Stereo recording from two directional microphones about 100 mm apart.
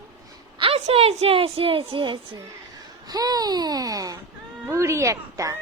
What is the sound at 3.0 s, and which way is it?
A woman's voice, 40° right (ahead or behind).